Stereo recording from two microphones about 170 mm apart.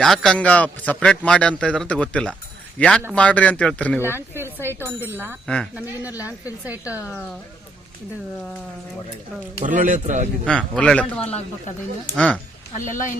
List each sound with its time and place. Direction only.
0.0 s a man's voice: centre (ahead or behind)
4.0 s speech: 15° right (ahead or behind)
6.7 s speech: 10° right (ahead or behind)
9.6 s a man's voice: 50° right (ahead or behind)
10.4 s speech: 5° left (ahead or behind)
11.2 s speech: 35° left (ahead or behind)
12.1 s speech: 5° left (ahead or behind)